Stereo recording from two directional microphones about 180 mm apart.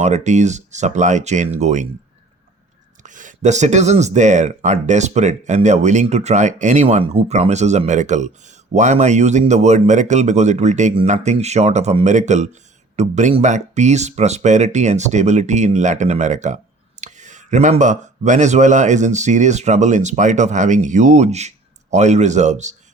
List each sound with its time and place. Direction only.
0.0 s speech: 40° right (ahead or behind)
3.0 s speech: 45° right (ahead or behind)